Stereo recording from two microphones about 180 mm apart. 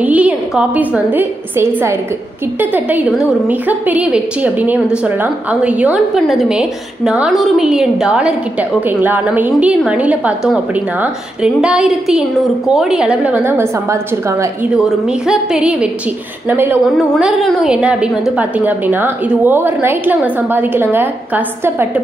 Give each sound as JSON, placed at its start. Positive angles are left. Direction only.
{"t": 0.0, "sound": "a woman's voice", "side_deg": -10}
{"t": 15.2, "sound": "a woman's voice", "side_deg": -5}